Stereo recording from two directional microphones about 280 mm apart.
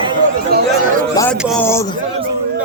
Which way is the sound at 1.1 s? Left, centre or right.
Centre.